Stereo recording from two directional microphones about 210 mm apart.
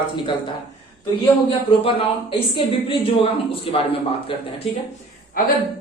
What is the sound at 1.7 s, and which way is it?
Speech, 25° left (ahead or behind).